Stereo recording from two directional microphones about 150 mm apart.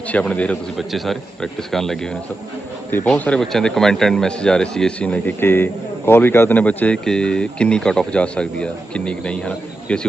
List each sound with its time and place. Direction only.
0.1 s a man's voice: 10° left (ahead or behind)
3.1 s speech: 5° left (ahead or behind)